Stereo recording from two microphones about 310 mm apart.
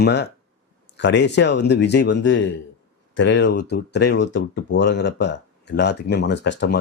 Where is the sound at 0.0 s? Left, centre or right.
Left.